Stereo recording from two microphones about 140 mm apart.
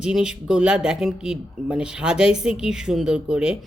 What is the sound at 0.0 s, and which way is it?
Speech, 5° right (ahead or behind).